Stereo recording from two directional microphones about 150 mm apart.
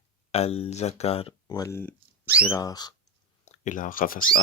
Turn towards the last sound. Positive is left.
turn(degrees=65)  # may be behind; listen again after turning